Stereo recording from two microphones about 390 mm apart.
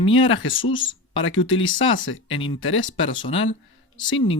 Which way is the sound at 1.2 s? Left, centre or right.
Left.